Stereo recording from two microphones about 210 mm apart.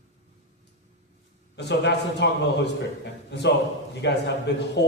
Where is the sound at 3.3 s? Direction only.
55° left (ahead or behind).